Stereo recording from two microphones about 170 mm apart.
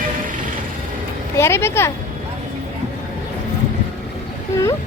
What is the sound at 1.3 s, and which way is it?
Speech, 15° left (ahead or behind).